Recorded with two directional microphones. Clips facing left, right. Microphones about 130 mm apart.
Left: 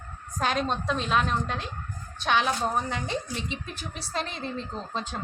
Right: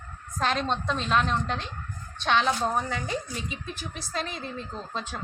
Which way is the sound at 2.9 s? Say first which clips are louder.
Even; 25° left (ahead or behind).